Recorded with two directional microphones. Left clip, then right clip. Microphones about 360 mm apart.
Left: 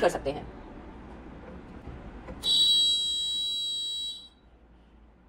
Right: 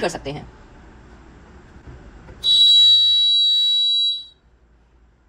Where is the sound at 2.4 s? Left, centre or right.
Right.